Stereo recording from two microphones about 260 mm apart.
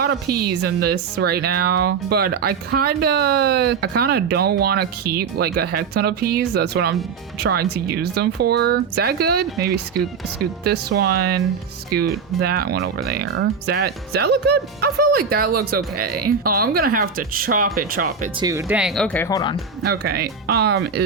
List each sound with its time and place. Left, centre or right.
0.0 s a woman's voice: right
12.4 s a woman's voice: right
18.3 s speech: centre
19.8 s a woman's voice: right